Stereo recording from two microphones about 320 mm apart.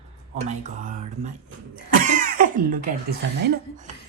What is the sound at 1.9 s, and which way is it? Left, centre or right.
Throat clearing, right.